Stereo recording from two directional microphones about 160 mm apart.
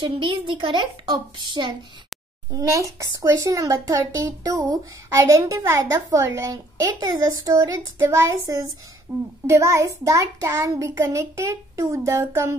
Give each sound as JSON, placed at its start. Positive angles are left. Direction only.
{"t": 0.0, "sound": "a child's voice", "side_deg": -30}